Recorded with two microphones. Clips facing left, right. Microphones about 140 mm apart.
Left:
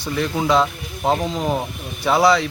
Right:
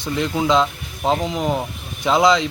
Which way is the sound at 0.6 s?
15° left (ahead or behind).